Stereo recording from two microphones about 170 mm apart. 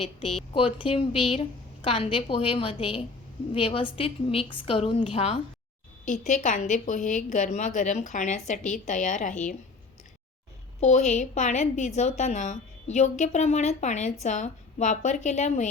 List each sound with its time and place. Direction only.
0.0 s a woman's voice: 35° left (ahead or behind)
10.8 s a woman's voice: 40° left (ahead or behind)